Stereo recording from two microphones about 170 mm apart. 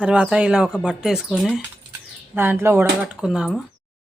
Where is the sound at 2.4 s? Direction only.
15° right (ahead or behind).